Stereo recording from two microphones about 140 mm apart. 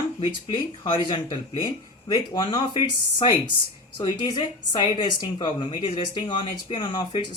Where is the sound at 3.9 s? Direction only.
30° left (ahead or behind).